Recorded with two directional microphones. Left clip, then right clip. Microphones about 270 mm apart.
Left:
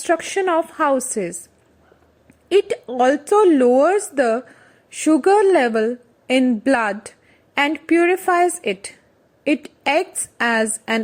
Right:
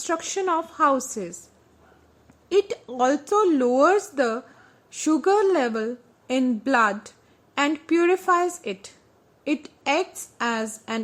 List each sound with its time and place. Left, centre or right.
0.0 s a woman's voice: centre
2.5 s a woman's voice: centre